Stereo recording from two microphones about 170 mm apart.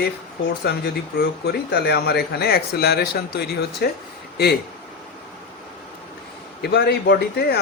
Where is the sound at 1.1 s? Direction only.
70° left (ahead or behind).